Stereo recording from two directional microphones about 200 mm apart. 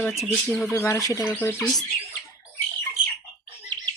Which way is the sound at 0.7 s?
15° left (ahead or behind).